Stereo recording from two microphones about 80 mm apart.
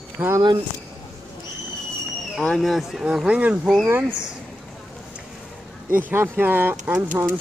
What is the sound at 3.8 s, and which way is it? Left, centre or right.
Speech, right.